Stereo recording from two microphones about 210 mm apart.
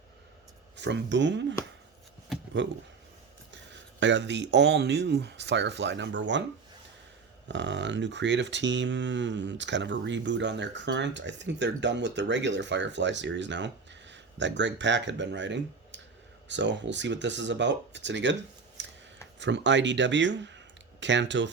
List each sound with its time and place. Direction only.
0.8 s speech: 55° right (ahead or behind)
2.6 s speech: 60° right (ahead or behind)
7.4 s speech: 55° right (ahead or behind)
18.8 s scissors: 60° right (ahead or behind)
19.4 s speech: 60° right (ahead or behind)